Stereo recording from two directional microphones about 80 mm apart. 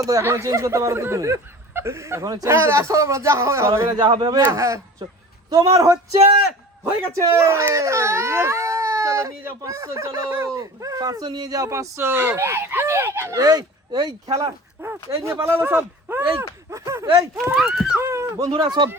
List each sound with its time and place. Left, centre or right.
0.0 s speech: right
2.2 s speech: right
2.5 s speech: right
3.9 s a man's voice: right
4.5 s a man's voice: right
13.3 s speech: right
14.8 s speech: right
17.5 s speech: centre
17.9 s a sound: right
18.6 s speech: right